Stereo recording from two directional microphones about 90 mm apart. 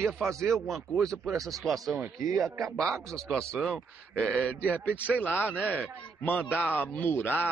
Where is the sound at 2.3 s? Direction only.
35° right (ahead or behind).